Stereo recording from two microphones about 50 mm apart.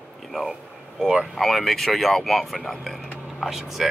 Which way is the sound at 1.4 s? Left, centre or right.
Centre.